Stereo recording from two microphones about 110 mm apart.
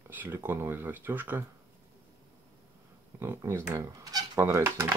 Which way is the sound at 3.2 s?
25° right (ahead or behind).